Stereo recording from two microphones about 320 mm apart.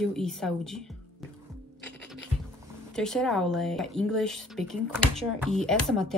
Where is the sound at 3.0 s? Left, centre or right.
Centre.